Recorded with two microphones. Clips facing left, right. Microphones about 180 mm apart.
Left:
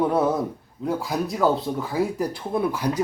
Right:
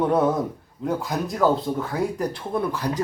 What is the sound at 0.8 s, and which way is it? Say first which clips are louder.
Speech: even; centre (ahead or behind).